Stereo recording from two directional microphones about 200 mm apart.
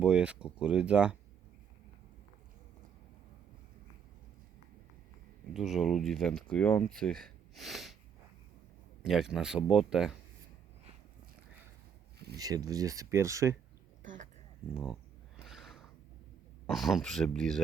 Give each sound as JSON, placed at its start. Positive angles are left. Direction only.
{"t": 0.0, "sound": "speech", "side_deg": -5}
{"t": 5.5, "sound": "speech", "side_deg": 0}
{"t": 9.0, "sound": "speech", "side_deg": 0}
{"t": 12.4, "sound": "speech", "side_deg": -20}
{"t": 15.4, "sound": "a sound", "side_deg": 0}
{"t": 16.6, "sound": "speech", "side_deg": 0}